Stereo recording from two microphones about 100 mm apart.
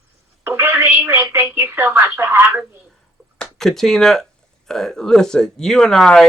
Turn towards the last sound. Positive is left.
turn(degrees=5)  # may be behind; listen again after turning